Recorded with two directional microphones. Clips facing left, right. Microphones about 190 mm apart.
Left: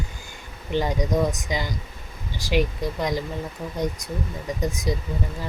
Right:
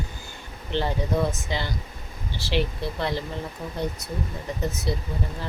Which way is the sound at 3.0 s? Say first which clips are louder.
Left 2 dB; 15° left (ahead or behind).